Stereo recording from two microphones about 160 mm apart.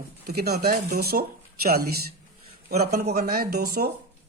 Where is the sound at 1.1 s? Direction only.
65° right (ahead or behind).